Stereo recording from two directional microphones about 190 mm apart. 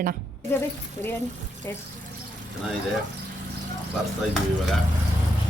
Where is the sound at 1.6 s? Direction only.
10° left (ahead or behind).